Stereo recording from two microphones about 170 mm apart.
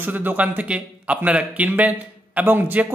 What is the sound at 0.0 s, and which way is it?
A man's voice, 10° right (ahead or behind).